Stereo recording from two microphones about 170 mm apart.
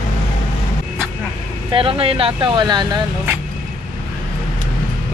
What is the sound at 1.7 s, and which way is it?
Speech, 30° right (ahead or behind).